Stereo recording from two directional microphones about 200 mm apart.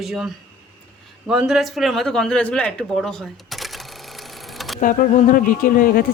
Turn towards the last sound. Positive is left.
turn(degrees=45)  # may be behind; listen again after turning